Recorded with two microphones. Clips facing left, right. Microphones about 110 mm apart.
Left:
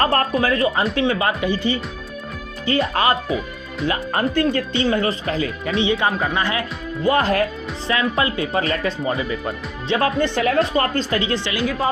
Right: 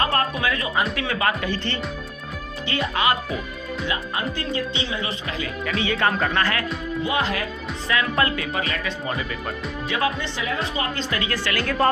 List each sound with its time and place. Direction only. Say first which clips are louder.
0.0 s speech: left 4 dB; 35° left (ahead or behind)
1.5 s speech: left 6 dB; 10° left (ahead or behind)
2.6 s speech: left 4 dB; 35° left (ahead or behind)
3.8 s speech: left 7 dB; 45° left (ahead or behind); by 6.7 s 20° left (ahead or behind)
7.0 s speech: left 8 dB; 45° left (ahead or behind)
7.9 s speech: left 2 dB; 25° left (ahead or behind)
10.2 s speech: left 9 dB; 60° left (ahead or behind)
10.9 s speech: left 5 dB; 30° left (ahead or behind)
11.6 s speech: right 2 dB; 5° left (ahead or behind)